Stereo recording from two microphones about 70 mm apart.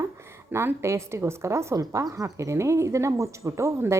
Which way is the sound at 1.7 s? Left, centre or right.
Right.